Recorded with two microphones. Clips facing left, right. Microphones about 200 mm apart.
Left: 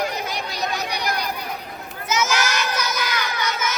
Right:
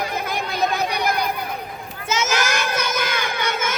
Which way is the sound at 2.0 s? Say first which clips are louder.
Even; 25° right (ahead or behind).